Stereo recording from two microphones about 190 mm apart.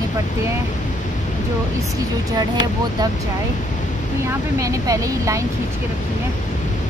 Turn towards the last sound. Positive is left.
turn(degrees=-15)  # may be behind; listen again after turning